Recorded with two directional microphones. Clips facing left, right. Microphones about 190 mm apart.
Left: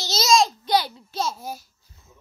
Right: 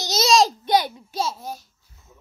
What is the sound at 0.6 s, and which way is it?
Speech, 20° right (ahead or behind).